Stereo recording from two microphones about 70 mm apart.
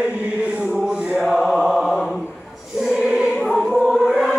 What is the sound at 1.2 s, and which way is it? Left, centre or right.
Mantra, centre.